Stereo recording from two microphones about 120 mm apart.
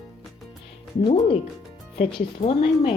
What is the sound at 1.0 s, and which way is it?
Speech, 50° left (ahead or behind).